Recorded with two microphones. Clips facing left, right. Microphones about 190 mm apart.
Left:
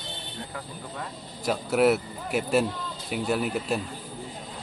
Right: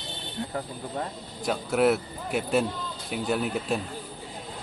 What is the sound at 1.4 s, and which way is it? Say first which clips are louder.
A man's voice: left 1 dB; 5° left (ahead or behind).